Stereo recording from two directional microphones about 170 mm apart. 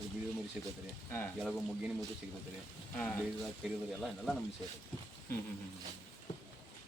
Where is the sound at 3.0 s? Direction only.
10° left (ahead or behind).